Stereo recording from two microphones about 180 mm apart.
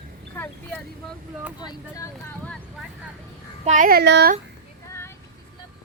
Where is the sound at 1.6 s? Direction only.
20° left (ahead or behind).